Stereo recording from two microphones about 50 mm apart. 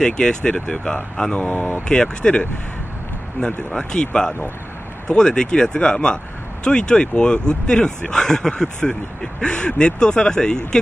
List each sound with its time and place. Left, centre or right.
0.0 s speech: centre
1.3 s speech: left
1.9 s speech: centre